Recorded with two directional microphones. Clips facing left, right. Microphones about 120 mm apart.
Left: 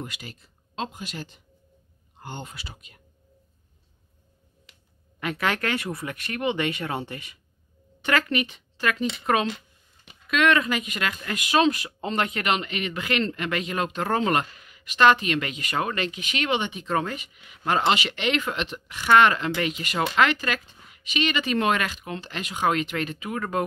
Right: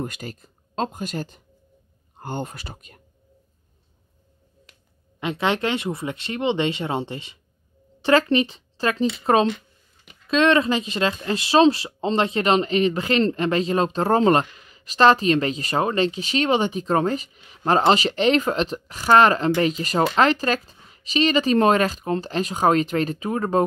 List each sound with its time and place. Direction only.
0.0 s speech: 45° right (ahead or behind)
5.2 s speech: 25° right (ahead or behind)